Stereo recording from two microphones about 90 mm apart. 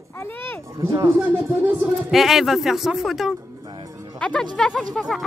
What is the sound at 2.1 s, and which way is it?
A woman's voice, centre (ahead or behind).